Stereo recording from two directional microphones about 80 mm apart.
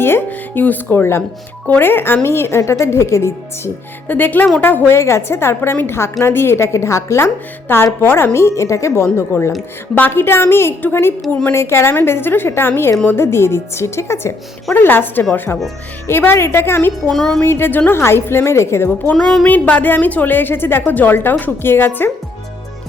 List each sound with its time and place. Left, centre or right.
0.0 s a woman's voice: left
4.1 s speech: left
4.9 s a woman's voice: left
7.7 s a woman's voice: left
14.7 s a woman's voice: left
17.1 s music: centre
17.4 s a woman's voice: left
19.1 s music: centre
19.5 s speech: centre